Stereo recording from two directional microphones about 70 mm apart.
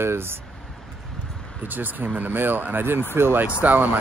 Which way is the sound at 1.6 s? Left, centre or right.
Right.